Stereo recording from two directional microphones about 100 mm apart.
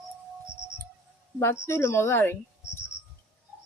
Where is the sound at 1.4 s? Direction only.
25° left (ahead or behind).